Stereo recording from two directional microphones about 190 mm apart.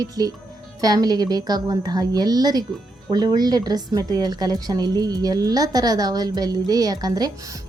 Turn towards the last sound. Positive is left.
turn(degrees=-20)  # may be behind; listen again after turning